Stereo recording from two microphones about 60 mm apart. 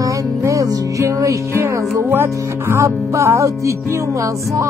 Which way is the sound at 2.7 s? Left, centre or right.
Right.